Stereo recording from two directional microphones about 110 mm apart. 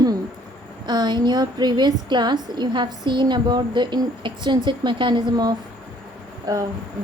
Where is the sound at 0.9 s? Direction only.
40° right (ahead or behind).